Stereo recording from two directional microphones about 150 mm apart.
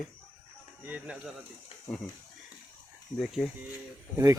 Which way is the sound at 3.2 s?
Centre (ahead or behind).